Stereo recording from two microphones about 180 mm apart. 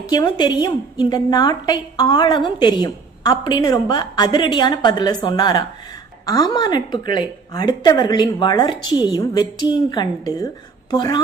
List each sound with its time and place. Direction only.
0.0 s a woman's voice: 25° left (ahead or behind)